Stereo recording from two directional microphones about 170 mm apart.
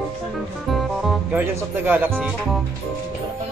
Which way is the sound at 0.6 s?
Centre (ahead or behind).